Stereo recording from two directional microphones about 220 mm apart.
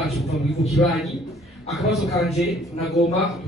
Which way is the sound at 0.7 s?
Centre (ahead or behind).